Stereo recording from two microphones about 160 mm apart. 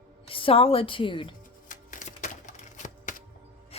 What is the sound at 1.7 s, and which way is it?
Music, 55° left (ahead or behind).